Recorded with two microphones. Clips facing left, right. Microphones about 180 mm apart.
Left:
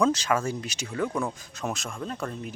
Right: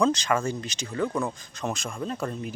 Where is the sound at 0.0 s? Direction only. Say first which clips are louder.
Even; 5° left (ahead or behind).